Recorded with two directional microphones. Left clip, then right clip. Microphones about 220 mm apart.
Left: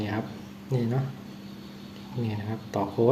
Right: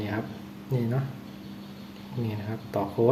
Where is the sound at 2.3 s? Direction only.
Centre (ahead or behind).